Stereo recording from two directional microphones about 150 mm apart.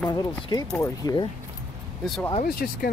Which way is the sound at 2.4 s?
85° left.